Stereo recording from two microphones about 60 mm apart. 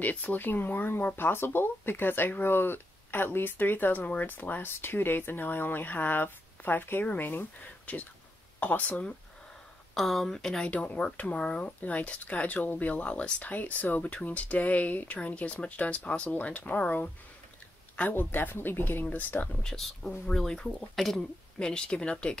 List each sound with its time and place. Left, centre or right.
0.0 s speech: left
9.9 s speech: centre
10.7 s speech: centre
18.1 s speech: left
19.6 s speech: centre